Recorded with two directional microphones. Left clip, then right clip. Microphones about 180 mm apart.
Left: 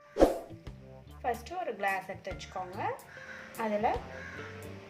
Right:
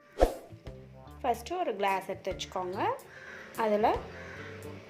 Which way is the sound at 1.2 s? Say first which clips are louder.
Right 3 dB; 35° right (ahead or behind).